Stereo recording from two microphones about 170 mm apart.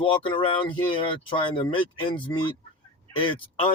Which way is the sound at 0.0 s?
30° left (ahead or behind).